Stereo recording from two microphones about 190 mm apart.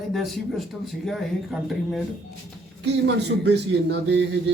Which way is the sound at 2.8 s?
60° right (ahead or behind).